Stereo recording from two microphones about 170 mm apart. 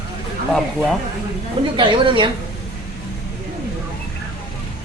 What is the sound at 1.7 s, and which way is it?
Speech, 30° right (ahead or behind).